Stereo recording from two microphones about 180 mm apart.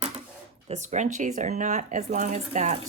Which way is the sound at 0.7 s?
40° right (ahead or behind).